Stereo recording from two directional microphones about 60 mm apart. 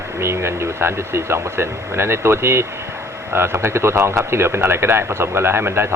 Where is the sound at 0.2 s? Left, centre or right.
Right.